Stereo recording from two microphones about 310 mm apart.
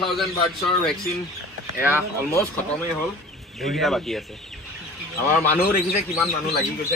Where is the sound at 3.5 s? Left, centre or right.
Centre.